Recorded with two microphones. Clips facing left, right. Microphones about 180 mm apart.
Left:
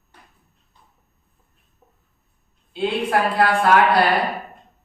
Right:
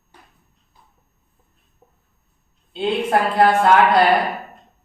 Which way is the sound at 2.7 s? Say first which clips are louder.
Right 2 dB; 25° right (ahead or behind).